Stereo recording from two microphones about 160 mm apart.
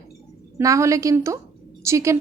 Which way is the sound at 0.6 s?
20° right (ahead or behind).